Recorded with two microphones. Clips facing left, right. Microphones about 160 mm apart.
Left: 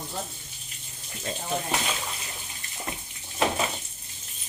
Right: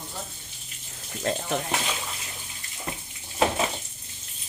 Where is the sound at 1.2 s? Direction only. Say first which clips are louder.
Right 5 dB; 65° right (ahead or behind).